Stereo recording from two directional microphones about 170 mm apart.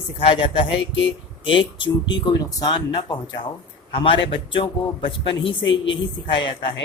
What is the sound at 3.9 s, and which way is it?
A man's voice, 30° left (ahead or behind).